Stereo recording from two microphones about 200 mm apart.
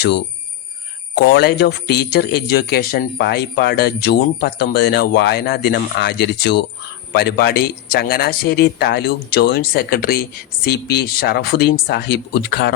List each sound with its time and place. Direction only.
1.1 s speech: 55° left (ahead or behind)